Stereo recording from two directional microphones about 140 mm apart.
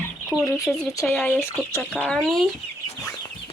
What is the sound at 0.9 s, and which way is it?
Speech, 20° left (ahead or behind).